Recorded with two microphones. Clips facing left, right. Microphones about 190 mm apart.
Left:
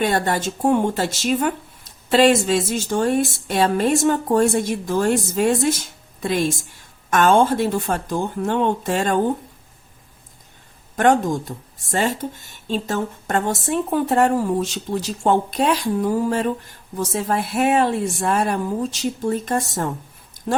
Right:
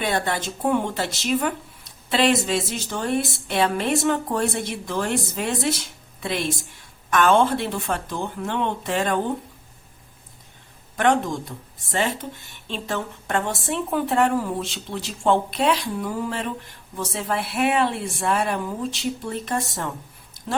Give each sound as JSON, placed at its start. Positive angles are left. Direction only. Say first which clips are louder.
{"t": 0.0, "sound": "speech", "louder": "left 4 dB", "side_deg": 45}
{"t": 10.9, "sound": "speech", "louder": "left 4 dB", "side_deg": 45}